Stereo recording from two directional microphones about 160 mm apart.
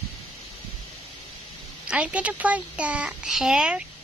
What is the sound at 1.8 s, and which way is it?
A child's voice, 5° right (ahead or behind).